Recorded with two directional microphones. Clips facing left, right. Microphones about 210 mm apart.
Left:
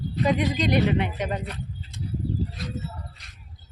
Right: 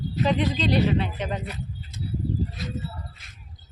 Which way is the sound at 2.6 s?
Centre (ahead or behind).